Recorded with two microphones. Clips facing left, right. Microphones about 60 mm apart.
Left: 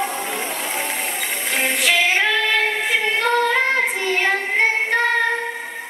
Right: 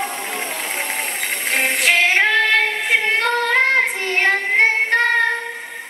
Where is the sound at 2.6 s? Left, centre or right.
Centre.